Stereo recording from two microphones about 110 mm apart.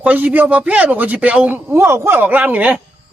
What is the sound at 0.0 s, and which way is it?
A man's voice, 15° right (ahead or behind).